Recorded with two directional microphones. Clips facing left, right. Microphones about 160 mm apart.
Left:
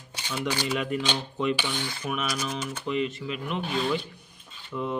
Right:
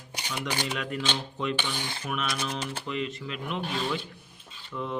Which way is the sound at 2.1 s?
5° left (ahead or behind).